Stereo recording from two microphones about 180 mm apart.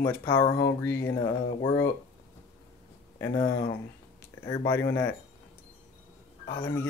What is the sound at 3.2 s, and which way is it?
Speech, 15° left (ahead or behind).